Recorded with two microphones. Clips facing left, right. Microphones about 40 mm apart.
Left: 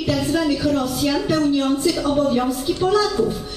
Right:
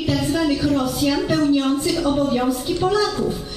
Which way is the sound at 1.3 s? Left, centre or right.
Centre.